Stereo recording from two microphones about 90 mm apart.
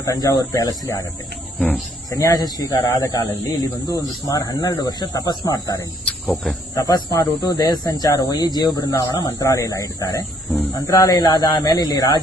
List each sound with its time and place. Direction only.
0.0 s speech: 40° left (ahead or behind)
2.0 s speech: 40° left (ahead or behind)
6.2 s cricket: 5° left (ahead or behind)
6.7 s speech: 40° left (ahead or behind)
11.2 s speech: 50° left (ahead or behind)